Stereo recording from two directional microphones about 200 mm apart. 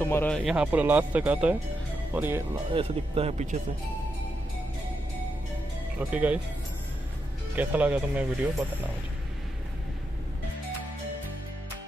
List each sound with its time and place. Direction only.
0.0 s speech: 10° left (ahead or behind); by 2.4 s 10° right (ahead or behind)
2.5 s speech: 25° right (ahead or behind)
5.9 s speech: 10° right (ahead or behind)
7.5 s speech: 10° right (ahead or behind)